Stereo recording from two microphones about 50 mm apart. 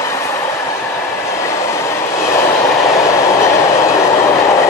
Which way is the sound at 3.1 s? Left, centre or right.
Left.